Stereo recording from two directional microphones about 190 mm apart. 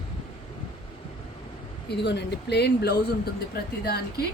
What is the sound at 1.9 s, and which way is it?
Speech, 60° left (ahead or behind).